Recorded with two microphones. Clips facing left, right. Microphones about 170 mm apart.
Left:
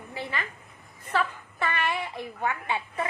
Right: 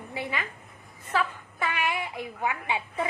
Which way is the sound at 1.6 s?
10° right (ahead or behind).